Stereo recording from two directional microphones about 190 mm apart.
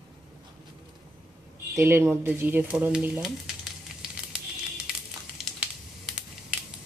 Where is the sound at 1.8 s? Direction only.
15° right (ahead or behind).